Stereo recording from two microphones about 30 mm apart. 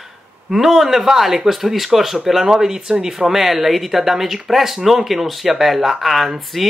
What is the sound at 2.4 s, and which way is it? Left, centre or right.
Speech, centre.